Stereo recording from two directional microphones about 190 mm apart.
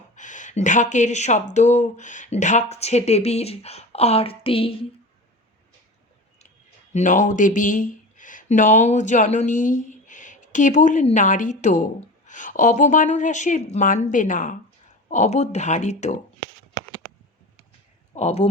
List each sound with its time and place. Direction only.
0.2 s speech: 40° left (ahead or behind)
6.9 s speech: 40° left (ahead or behind)
16.8 s a sound: 20° left (ahead or behind)
18.1 s speech: 35° left (ahead or behind)